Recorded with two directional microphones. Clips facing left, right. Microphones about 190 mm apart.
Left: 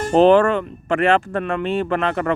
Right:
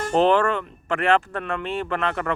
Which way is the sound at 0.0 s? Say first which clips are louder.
Left 6 dB; 15° left (ahead or behind).